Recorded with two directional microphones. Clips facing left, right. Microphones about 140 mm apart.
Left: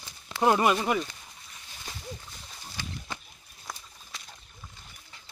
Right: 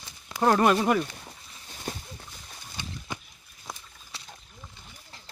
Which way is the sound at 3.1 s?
15° right (ahead or behind).